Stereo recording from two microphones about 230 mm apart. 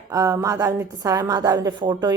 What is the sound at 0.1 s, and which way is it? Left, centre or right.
Speech, centre.